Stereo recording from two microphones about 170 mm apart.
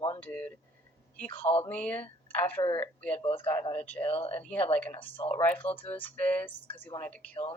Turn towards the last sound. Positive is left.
turn(degrees=5)  # may be behind; listen again after turning